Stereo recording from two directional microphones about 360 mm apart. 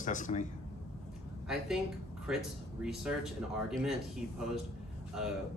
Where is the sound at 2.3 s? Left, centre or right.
Centre.